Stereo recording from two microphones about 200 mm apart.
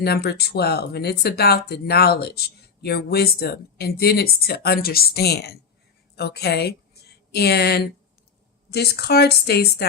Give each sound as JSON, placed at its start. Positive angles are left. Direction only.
{"t": 0.0, "sound": "a woman's voice", "side_deg": 55}